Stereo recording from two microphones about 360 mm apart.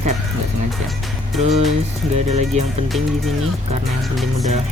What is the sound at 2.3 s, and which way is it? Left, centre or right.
Speech, centre.